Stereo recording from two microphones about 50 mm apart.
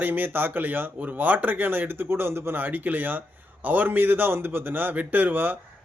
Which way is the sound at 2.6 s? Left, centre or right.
Right.